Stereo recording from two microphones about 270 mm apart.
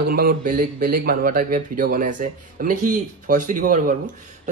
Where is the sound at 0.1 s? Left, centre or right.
Right.